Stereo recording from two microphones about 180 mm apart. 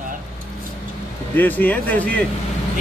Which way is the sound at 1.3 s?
10° left (ahead or behind).